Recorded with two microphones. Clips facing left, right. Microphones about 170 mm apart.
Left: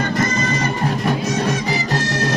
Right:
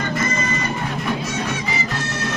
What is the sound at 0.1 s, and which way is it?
Music, 40° left (ahead or behind).